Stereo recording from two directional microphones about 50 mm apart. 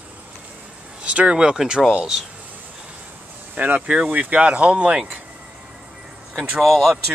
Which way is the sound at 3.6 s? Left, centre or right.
Right.